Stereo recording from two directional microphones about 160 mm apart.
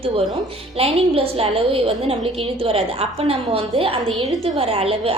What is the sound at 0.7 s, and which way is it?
A woman's voice, 35° right (ahead or behind).